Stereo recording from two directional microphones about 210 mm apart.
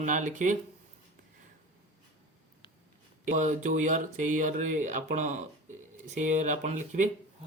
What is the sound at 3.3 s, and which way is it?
Speech, 35° right (ahead or behind).